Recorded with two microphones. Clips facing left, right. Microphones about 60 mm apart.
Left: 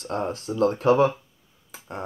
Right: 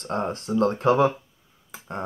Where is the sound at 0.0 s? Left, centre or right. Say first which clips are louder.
Right 1 dB; right.